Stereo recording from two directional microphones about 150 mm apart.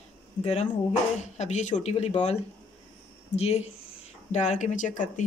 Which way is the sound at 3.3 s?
45° left (ahead or behind).